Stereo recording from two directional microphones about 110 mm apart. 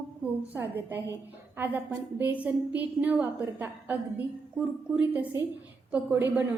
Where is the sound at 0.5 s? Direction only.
20° right (ahead or behind).